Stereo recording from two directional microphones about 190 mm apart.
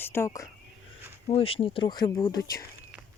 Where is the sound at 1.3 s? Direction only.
30° left (ahead or behind).